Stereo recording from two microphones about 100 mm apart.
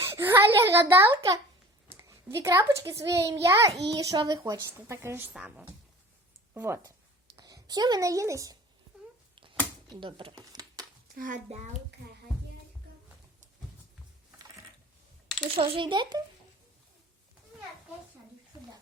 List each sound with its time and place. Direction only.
0.0 s a child's voice: 20° right (ahead or behind)
5.3 s speech: 10° right (ahead or behind)
6.5 s speech: 20° right (ahead or behind)
7.3 s speech: 40° right (ahead or behind)
9.9 s a sound: 55° right (ahead or behind)
15.4 s a child's voice: 70° right (ahead or behind); by 16.2 s 50° right (ahead or behind)